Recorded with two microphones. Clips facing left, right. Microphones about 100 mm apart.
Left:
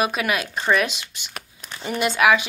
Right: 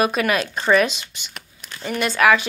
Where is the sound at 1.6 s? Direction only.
20° left (ahead or behind).